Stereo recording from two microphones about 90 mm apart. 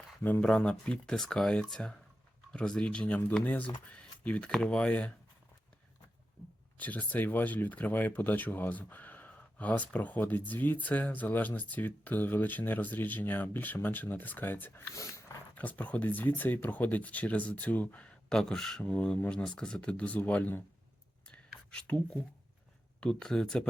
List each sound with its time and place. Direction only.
0.2 s speech: 25° left (ahead or behind)
0.4 s speech: 10° left (ahead or behind)
3.9 s a sound: 15° left (ahead or behind)
4.5 s speech: 10° left (ahead or behind)
6.7 s speech: 20° left (ahead or behind)
14.9 s dog: 35° left (ahead or behind)
15.5 s speech: 20° left (ahead or behind)
21.2 s whispering: 10° left (ahead or behind)
23.0 s speech: 10° left (ahead or behind)